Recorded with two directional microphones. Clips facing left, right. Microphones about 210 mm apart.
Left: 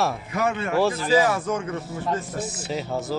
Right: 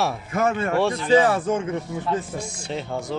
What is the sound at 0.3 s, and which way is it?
Speech, 50° right (ahead or behind).